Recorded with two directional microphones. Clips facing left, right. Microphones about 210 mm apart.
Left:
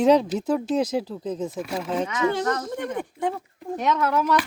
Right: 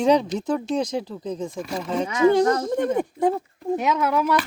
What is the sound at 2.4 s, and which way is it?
Speech, 25° right (ahead or behind).